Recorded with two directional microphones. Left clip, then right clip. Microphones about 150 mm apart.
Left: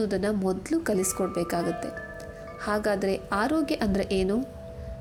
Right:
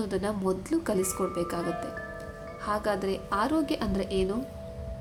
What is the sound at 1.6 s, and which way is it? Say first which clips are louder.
Music: left 2 dB; 5° right (ahead or behind).